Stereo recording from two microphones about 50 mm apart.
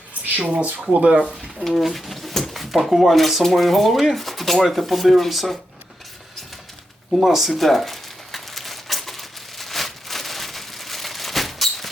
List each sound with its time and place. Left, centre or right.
0.4 s speech: right
1.6 s speech: centre
7.2 s crumpling: centre